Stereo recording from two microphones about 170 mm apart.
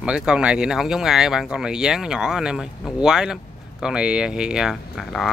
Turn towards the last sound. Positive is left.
turn(degrees=0)  # may be behind; listen again after turning